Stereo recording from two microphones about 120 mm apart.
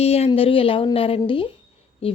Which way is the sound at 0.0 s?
55° left (ahead or behind).